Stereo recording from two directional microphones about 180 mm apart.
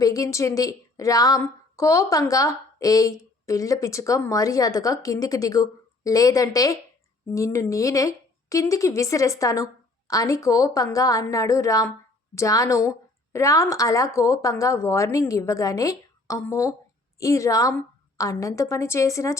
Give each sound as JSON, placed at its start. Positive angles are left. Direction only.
{"t": 0.0, "sound": "a woman's voice", "side_deg": 20}